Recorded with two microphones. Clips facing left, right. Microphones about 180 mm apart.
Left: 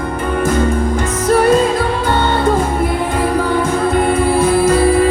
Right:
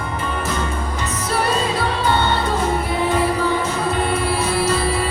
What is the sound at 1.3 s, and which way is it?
Music, 50° left (ahead or behind).